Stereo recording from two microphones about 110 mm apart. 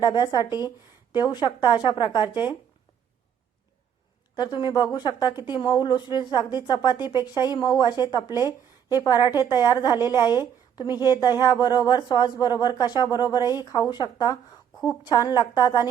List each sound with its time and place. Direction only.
0.0 s a woman's voice: 40° left (ahead or behind)
4.4 s a woman's voice: 45° left (ahead or behind)